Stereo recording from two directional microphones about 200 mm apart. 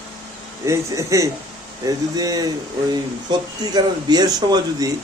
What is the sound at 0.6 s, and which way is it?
Speech, 15° right (ahead or behind).